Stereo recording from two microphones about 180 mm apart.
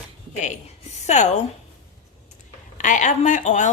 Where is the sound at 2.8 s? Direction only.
45° left (ahead or behind).